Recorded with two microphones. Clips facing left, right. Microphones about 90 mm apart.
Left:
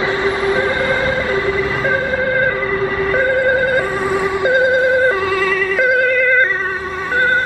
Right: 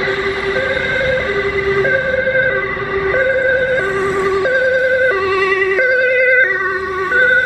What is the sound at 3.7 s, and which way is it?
Emergency vehicle, 5° left (ahead or behind).